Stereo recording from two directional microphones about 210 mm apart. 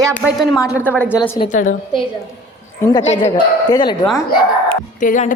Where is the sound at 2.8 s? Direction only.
15° left (ahead or behind).